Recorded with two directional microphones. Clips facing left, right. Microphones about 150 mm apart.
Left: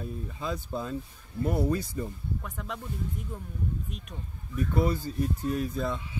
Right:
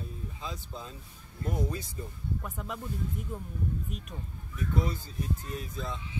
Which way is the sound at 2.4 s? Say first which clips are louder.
Even; 5° right (ahead or behind).